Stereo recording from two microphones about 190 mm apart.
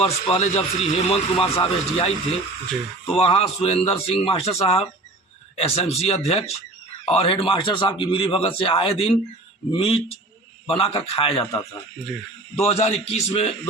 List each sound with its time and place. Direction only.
0.0 s speech: 30° left (ahead or behind)
12.5 s speech: 35° left (ahead or behind)